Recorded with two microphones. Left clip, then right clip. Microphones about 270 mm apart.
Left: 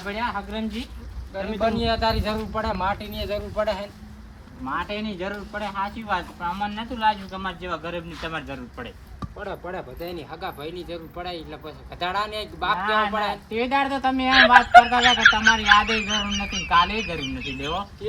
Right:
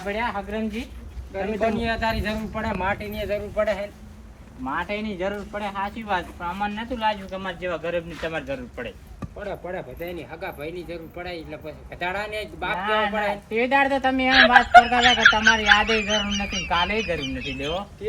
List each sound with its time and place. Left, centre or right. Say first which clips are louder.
0.0 s speech: right 1 dB; centre
1.3 s speech: even; left
4.6 s speech: right 1 dB; centre
9.4 s speech: right 1 dB; left
12.7 s speech: even; centre
14.3 s speech: left 1 dB; centre